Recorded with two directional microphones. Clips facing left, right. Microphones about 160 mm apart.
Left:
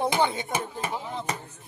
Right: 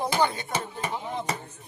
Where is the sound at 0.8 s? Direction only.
5° left (ahead or behind).